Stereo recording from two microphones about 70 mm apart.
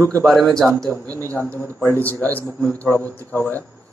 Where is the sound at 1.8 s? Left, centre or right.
Left.